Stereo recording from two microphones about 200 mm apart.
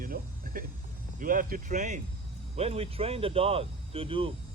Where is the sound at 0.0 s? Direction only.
45° right (ahead or behind).